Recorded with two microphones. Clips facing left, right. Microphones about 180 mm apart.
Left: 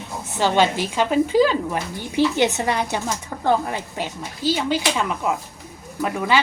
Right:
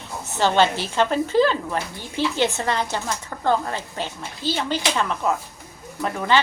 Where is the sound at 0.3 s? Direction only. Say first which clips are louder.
Even; 10° left (ahead or behind).